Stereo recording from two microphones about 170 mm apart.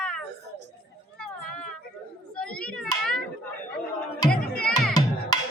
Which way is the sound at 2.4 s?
5° left (ahead or behind).